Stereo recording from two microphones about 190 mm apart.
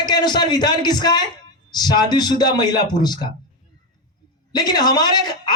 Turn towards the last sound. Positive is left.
turn(degrees=20)  # may be behind; listen again after turning